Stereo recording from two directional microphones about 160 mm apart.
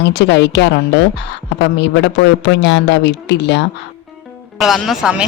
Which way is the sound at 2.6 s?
90° left.